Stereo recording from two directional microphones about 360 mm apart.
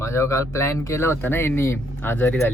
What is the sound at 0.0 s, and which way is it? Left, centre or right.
Speech, centre.